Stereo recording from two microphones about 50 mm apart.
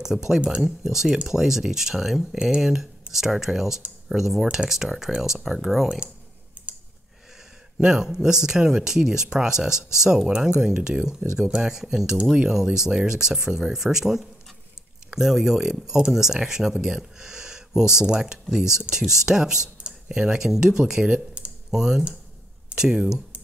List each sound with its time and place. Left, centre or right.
0.0 s speech: centre
6.6 s clicking: right
7.8 s speech: centre
21.0 s speech: right
21.6 s speech: centre